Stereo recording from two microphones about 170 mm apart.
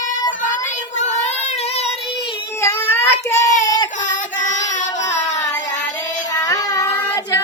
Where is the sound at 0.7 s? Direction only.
45° left (ahead or behind).